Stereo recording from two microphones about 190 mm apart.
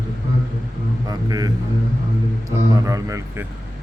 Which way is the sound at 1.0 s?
20° right (ahead or behind).